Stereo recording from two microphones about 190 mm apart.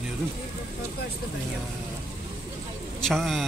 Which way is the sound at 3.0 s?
Centre (ahead or behind).